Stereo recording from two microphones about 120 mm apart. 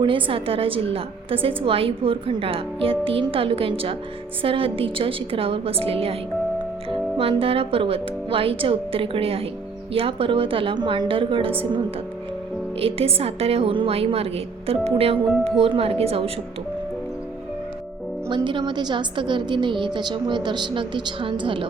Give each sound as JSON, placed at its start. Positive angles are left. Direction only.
{"t": 0.0, "sound": "a woman's voice", "side_deg": -45}
{"t": 7.2, "sound": "a woman's voice", "side_deg": -50}
{"t": 12.8, "sound": "a woman's voice", "side_deg": -55}
{"t": 18.3, "sound": "a woman's voice", "side_deg": -40}